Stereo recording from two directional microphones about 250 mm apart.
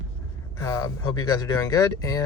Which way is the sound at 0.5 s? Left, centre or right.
Centre.